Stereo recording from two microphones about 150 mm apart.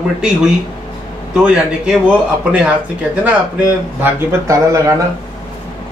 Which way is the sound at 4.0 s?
20° right (ahead or behind).